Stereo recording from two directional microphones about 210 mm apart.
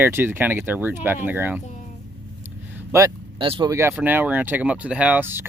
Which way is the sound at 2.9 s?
20° right (ahead or behind).